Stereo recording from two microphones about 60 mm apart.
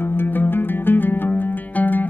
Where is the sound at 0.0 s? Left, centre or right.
Left.